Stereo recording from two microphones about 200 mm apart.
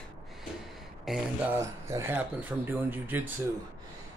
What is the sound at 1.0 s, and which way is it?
Speech, centre (ahead or behind).